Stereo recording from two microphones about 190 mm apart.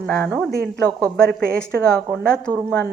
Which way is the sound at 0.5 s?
55° right (ahead or behind).